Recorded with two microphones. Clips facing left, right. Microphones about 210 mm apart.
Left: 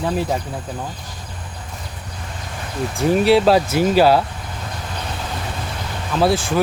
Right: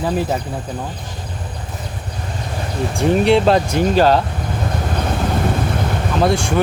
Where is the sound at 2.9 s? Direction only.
Centre (ahead or behind).